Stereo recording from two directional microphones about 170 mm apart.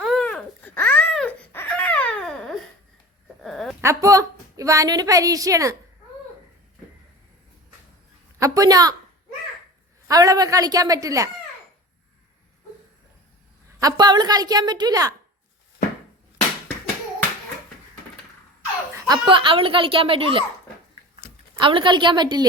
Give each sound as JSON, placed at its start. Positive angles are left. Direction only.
{"t": 0.0, "sound": "baby cry", "side_deg": 5}
{"t": 3.4, "sound": "a sound", "side_deg": 0}
{"t": 3.8, "sound": "a woman's voice", "side_deg": -20}
{"t": 8.4, "sound": "a woman's voice", "side_deg": -20}
{"t": 10.1, "sound": "a woman's voice", "side_deg": -20}
{"t": 13.8, "sound": "a woman's voice", "side_deg": -25}
{"t": 18.9, "sound": "speech", "side_deg": -25}
{"t": 21.6, "sound": "a woman's voice", "side_deg": -30}